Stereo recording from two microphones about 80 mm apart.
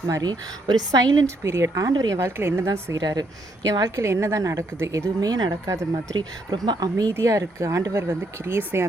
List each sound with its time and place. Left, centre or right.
0.2 s speech: right
1.5 s speech: right
3.0 s a woman's voice: right
5.2 s a woman's voice: right
6.5 s speech: right
7.1 s speech: right